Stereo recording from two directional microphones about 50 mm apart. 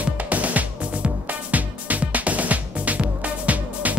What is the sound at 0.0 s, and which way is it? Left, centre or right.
Music, right.